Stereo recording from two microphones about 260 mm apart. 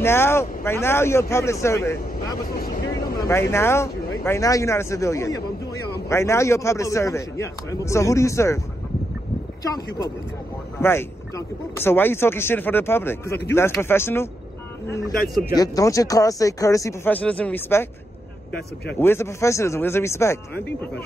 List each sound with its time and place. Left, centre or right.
0.0 s speech: centre
2.5 s vehicle: left
3.3 s speech: centre
9.6 s speech: centre
15.5 s speech: centre
18.9 s speech: centre